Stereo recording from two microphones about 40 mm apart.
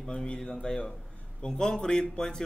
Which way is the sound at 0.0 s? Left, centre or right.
Centre.